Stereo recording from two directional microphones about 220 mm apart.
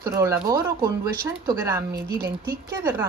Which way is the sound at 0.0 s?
15° right (ahead or behind).